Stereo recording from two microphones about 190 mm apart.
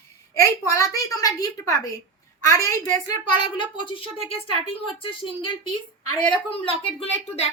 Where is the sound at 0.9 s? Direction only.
20° left (ahead or behind).